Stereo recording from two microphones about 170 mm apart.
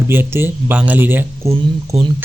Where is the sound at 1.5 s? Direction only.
35° right (ahead or behind).